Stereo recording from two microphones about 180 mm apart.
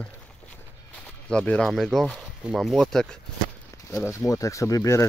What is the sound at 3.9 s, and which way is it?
Speech, 15° left (ahead or behind).